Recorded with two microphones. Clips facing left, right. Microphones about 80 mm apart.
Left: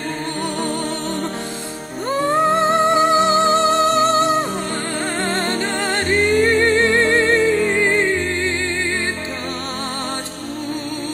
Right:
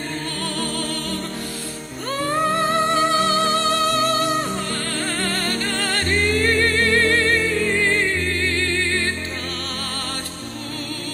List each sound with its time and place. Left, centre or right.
0.6 s music: left
2.2 s music: left